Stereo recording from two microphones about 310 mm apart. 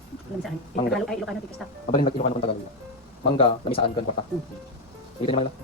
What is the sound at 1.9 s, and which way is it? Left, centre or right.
Speech, centre.